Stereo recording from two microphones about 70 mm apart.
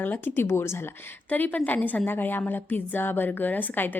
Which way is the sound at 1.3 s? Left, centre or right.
Left.